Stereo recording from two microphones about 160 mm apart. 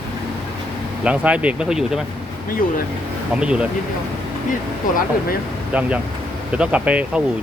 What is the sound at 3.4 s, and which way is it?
Speech, 5° right (ahead or behind).